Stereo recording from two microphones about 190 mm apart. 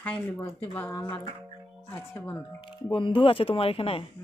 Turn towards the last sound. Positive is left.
turn(degrees=30)  # may be behind; listen again after turning